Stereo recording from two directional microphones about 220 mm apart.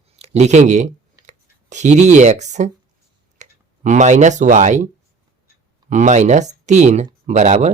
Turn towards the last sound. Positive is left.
turn(degrees=-30)  # may be behind; listen again after turning